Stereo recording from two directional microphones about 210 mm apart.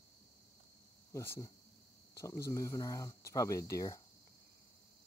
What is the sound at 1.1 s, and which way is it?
Speech, 15° left (ahead or behind).